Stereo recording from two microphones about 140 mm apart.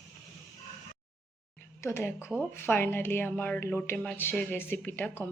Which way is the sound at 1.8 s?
20° left (ahead or behind).